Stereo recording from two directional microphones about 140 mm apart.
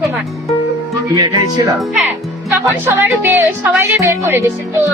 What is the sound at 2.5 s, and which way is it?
Speech, 20° right (ahead or behind).